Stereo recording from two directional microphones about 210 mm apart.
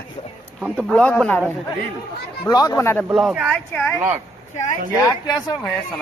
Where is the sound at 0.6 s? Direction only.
5° left (ahead or behind).